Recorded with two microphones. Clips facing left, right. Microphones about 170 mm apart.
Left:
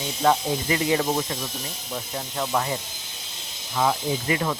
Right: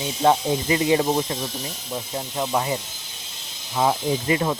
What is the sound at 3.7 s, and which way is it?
Speech, 25° right (ahead or behind).